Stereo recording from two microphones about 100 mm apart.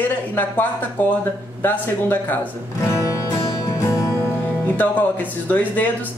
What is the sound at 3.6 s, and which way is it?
Music, 30° left (ahead or behind).